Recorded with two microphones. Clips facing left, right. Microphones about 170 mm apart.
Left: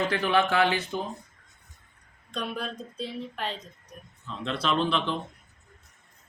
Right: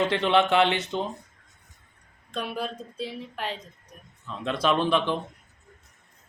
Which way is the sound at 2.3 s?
5° right (ahead or behind).